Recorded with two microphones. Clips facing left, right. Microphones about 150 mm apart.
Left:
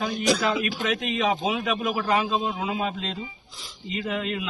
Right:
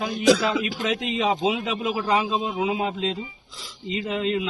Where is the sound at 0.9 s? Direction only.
25° right (ahead or behind).